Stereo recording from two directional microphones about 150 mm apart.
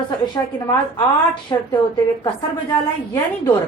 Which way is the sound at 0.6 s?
30° left (ahead or behind).